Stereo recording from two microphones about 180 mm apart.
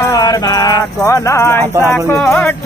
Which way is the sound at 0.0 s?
20° left (ahead or behind).